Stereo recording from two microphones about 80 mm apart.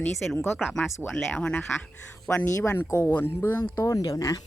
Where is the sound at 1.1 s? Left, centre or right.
Centre.